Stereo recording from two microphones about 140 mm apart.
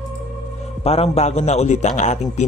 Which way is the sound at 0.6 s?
45° left (ahead or behind).